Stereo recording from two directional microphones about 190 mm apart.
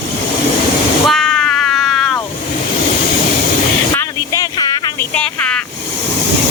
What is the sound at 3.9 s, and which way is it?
Vehicle, 20° left (ahead or behind).